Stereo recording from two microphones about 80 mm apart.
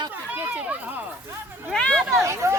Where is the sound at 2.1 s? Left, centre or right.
Right.